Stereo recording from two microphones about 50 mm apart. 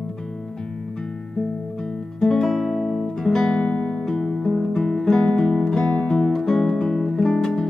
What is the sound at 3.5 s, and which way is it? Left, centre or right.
Guitar, left.